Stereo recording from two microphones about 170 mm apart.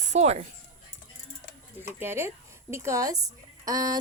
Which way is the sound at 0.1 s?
40° right (ahead or behind).